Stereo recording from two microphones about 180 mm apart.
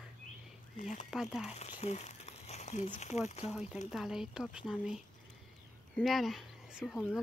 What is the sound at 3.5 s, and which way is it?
Speech, 5° right (ahead or behind).